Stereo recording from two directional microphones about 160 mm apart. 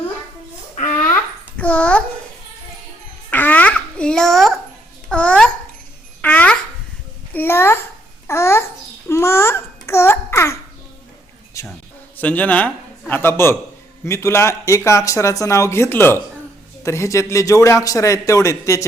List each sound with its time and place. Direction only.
0.9 s babbling: 10° left (ahead or behind)
3.2 s babbling: 10° left (ahead or behind)
7.3 s a child's voice: 15° left (ahead or behind)
11.6 s insect: 20° left (ahead or behind)
12.1 s a man's voice: 10° left (ahead or behind)